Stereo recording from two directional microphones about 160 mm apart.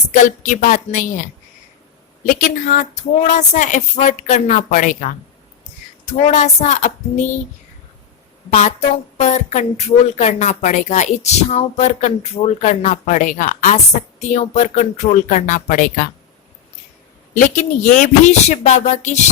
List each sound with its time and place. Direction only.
0.1 s a woman's voice: 55° left (ahead or behind)
2.2 s a woman's voice: 55° left (ahead or behind)
6.1 s a woman's voice: 45° left (ahead or behind)
8.4 s a woman's voice: 50° left (ahead or behind)
17.3 s a woman's voice: 50° left (ahead or behind)